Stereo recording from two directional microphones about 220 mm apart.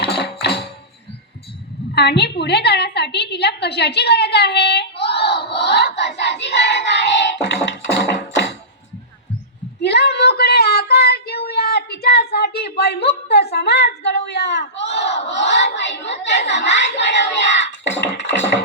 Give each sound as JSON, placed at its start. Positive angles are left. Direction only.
{"t": 1.9, "sound": "a woman's voice", "side_deg": 50}
{"t": 5.5, "sound": "child singing", "side_deg": 50}
{"t": 9.8, "sound": "child singing", "side_deg": 50}
{"t": 13.3, "sound": "speech", "side_deg": 45}